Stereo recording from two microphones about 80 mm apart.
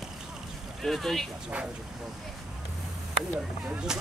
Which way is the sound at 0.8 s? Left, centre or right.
Centre.